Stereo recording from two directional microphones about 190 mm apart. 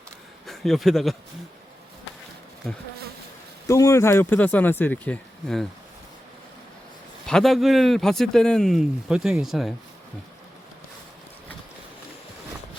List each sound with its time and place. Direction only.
0.4 s speech: centre (ahead or behind)
3.7 s speech: 15° left (ahead or behind)
7.3 s speech: centre (ahead or behind)